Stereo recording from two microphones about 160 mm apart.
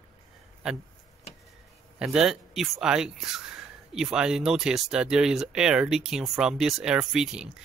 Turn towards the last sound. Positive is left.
turn(degrees=-5)  # may be behind; listen again after turning